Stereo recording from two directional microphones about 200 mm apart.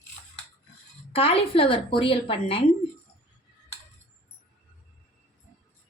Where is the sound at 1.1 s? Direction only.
30° left (ahead or behind).